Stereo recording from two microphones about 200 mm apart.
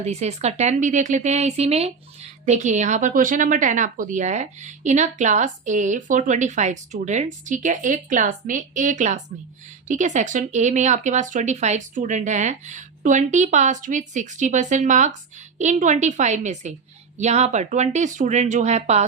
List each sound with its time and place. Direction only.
0.0 s a woman's voice: 35° right (ahead or behind)